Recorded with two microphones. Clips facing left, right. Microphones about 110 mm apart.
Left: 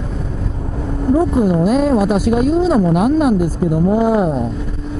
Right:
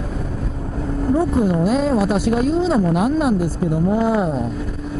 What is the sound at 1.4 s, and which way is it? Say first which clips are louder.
A woman's voice: left 3 dB; 10° left (ahead or behind).